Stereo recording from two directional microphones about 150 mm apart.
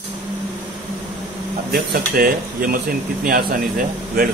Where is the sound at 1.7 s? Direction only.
70° right (ahead or behind).